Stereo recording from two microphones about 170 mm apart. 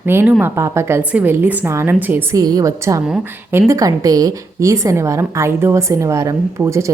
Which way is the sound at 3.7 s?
20° right (ahead or behind).